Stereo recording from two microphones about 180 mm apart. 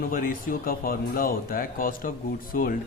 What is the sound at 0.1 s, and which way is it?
Speech, 50° left (ahead or behind).